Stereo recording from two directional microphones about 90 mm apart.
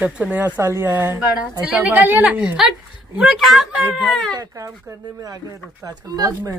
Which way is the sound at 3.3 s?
Centre (ahead or behind).